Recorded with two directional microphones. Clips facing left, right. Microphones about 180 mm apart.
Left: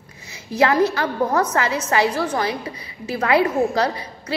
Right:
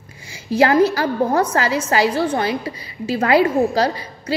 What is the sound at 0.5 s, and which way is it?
A woman's voice, 30° right (ahead or behind).